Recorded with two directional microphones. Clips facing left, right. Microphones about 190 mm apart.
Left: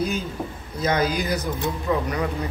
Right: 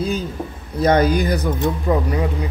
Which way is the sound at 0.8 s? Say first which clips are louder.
Right 7 dB; 55° right (ahead or behind).